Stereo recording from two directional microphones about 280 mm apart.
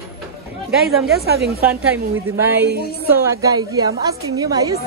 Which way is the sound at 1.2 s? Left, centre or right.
Right.